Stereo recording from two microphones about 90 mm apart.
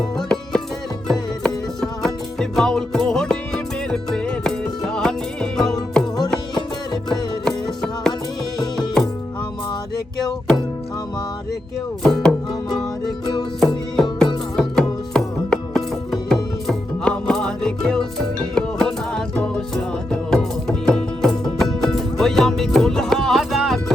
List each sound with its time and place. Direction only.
0.2 s music: 5° left (ahead or behind)
8.5 s music: 50° left (ahead or behind)
12.0 s music: 10° left (ahead or behind)
13.9 s music: 5° left (ahead or behind)